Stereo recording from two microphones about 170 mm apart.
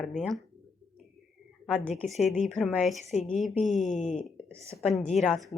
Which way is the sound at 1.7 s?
5° left (ahead or behind).